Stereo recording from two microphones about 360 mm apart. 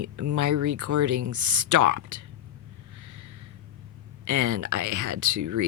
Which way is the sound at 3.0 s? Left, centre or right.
Right.